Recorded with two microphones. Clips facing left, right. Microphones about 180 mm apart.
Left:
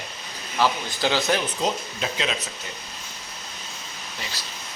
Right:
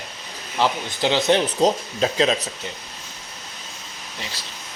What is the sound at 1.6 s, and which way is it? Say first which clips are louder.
Speech: right 7 dB; 35° right (ahead or behind).